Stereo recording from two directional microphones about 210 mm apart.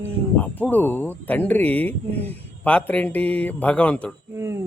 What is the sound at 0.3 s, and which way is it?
Speech, 5° left (ahead or behind).